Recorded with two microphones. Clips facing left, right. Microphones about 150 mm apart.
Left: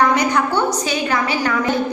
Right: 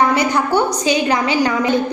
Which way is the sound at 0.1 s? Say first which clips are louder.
Right 1 dB; 10° right (ahead or behind).